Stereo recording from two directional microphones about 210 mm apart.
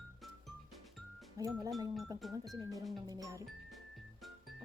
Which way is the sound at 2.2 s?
Centre (ahead or behind).